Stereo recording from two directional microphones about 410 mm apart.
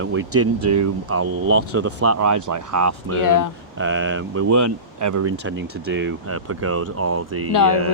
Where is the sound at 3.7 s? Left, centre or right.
Right.